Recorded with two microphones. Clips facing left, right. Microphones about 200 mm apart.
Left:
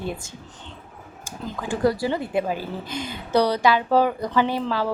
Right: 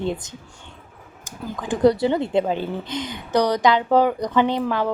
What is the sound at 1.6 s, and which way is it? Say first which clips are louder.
A woman's voice: right 5 dB; 20° right (ahead or behind).